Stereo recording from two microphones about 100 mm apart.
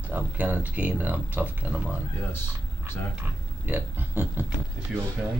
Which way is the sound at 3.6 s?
20° right (ahead or behind).